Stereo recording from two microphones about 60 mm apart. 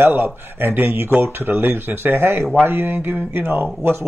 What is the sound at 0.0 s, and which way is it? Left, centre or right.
Speech, right.